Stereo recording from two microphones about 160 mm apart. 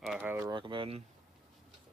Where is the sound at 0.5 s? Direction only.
30° right (ahead or behind).